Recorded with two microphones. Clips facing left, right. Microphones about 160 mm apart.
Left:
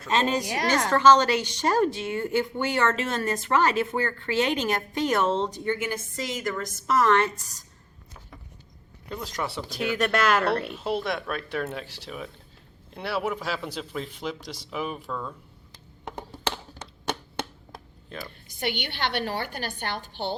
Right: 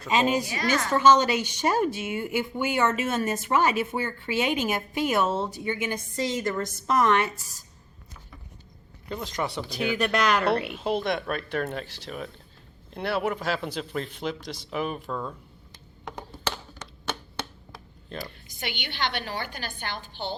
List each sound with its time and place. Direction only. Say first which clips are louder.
0.0 s a woman's voice: right 1 dB; 10° right (ahead or behind)
0.5 s a woman's voice: left 2 dB; 80° left
0.9 s a woman's voice: left 1 dB; 15° right (ahead or behind)
9.0 s speech: right 1 dB; centre (ahead or behind)
16.0 s a sound: left 1 dB; 30° left (ahead or behind)
18.7 s a woman's voice: left 1 dB; 60° left (ahead or behind)